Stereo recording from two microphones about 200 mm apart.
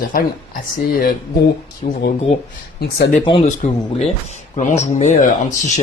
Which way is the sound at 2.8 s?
50° left (ahead or behind).